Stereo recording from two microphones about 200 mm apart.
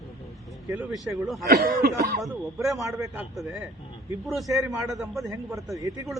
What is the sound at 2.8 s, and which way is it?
Speech, 15° right (ahead or behind).